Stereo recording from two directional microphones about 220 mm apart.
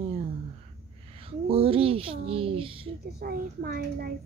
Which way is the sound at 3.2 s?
40° right (ahead or behind).